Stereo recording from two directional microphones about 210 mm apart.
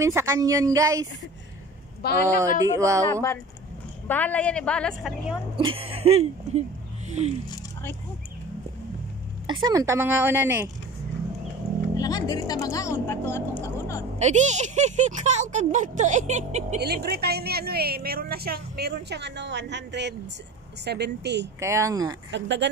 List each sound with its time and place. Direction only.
0.0 s a woman's voice: 15° right (ahead or behind)
2.0 s speech: 50° left (ahead or behind)
2.6 s a woman's voice: 15° right (ahead or behind)
4.1 s a woman's voice: 5° left (ahead or behind)
5.9 s speech: 30° right (ahead or behind)
9.5 s a woman's voice: 20° right (ahead or behind)
12.0 s speech: 20° left (ahead or behind)
14.2 s speech: 35° right (ahead or behind)
16.8 s a woman's voice: 50° right (ahead or behind)
21.5 s a woman's voice: 15° right (ahead or behind)
22.3 s speech: 55° right (ahead or behind)